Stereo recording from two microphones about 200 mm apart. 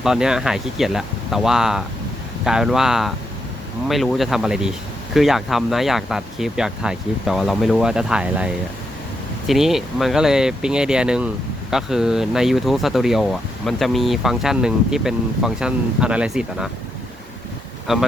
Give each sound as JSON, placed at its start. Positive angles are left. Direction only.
{"t": 0.0, "sound": "speech", "side_deg": -5}
{"t": 17.9, "sound": "speech", "side_deg": 0}